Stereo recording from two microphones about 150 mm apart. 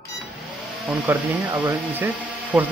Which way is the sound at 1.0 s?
15° right (ahead or behind).